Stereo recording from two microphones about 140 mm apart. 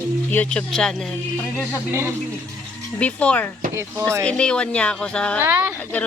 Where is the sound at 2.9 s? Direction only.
10° left (ahead or behind).